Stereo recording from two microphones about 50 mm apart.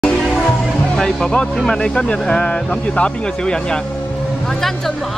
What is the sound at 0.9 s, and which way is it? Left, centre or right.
Music, centre.